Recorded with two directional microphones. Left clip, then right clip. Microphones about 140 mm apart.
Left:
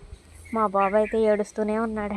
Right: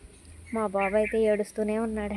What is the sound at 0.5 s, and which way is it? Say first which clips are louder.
Speech: left 4 dB; 5° left (ahead or behind).